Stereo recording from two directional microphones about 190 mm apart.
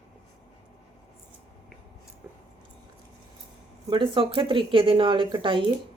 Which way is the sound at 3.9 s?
25° right (ahead or behind).